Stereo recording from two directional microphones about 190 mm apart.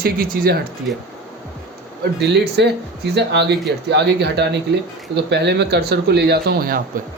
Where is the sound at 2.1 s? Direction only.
60° right (ahead or behind).